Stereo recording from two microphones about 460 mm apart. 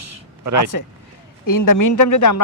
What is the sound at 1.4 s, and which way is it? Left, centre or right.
Speech, left.